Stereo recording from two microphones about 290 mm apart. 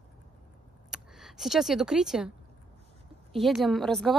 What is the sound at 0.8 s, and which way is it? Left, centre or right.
Speech, centre.